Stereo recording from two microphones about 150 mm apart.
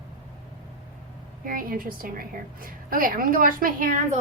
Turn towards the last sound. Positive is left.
turn(degrees=-70)  # may be behind; listen again after turning